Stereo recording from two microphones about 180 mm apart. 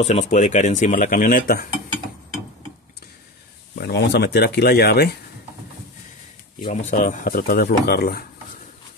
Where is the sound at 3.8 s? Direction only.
65° left (ahead or behind).